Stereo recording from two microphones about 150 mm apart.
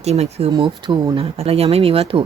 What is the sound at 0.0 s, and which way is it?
Speech, 45° right (ahead or behind).